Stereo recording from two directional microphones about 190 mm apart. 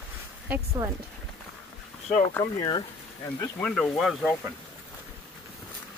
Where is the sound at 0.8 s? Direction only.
15° right (ahead or behind).